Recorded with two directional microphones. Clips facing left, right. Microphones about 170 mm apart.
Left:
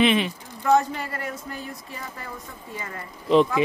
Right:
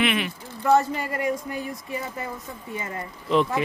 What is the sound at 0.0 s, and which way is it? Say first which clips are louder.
Speech: left 4 dB; 25° left (ahead or behind).